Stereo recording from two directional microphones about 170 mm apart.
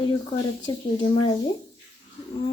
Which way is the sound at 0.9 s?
30° left (ahead or behind).